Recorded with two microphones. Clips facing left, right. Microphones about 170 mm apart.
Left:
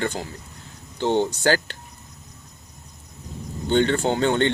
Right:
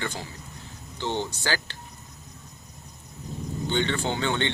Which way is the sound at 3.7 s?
45° left (ahead or behind).